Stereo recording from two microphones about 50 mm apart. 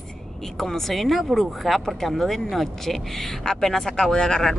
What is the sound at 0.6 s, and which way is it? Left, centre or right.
Speech, centre.